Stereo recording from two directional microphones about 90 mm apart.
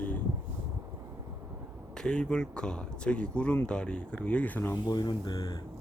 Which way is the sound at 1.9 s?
10° left (ahead or behind).